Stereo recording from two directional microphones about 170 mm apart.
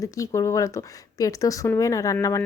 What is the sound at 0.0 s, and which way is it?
Speech, 20° left (ahead or behind).